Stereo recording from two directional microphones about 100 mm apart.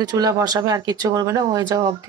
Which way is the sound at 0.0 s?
40° right (ahead or behind).